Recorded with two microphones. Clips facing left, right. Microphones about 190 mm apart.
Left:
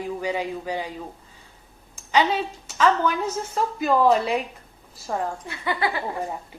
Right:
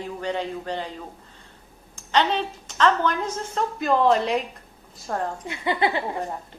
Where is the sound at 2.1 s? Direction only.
10° left (ahead or behind).